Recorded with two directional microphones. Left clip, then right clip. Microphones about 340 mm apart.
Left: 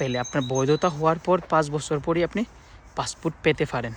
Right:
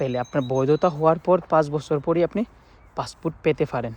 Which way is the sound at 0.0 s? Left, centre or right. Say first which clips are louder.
Right 2 dB; centre.